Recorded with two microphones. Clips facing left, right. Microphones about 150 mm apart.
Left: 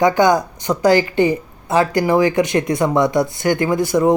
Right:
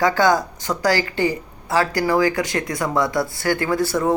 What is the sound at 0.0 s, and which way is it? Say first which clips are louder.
A woman's voice: left 3 dB; 20° left (ahead or behind).